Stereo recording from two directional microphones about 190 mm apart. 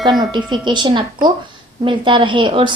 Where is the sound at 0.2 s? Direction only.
25° right (ahead or behind).